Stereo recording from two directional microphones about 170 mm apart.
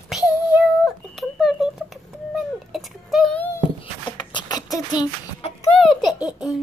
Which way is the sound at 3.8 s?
25° left (ahead or behind).